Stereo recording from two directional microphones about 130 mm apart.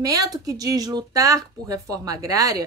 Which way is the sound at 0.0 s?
30° right (ahead or behind).